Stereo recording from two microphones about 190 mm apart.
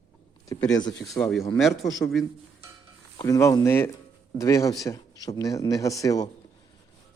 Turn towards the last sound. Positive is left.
turn(degrees=20)  # may be behind; listen again after turning